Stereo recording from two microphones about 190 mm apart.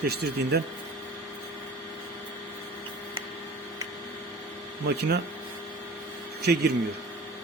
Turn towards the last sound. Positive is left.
turn(degrees=-55)  # may be behind; listen again after turning